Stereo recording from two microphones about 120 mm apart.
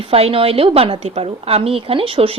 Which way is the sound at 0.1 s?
55° right (ahead or behind).